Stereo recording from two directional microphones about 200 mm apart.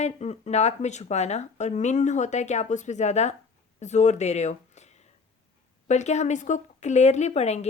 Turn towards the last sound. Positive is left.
turn(degrees=35)  # may be behind; listen again after turning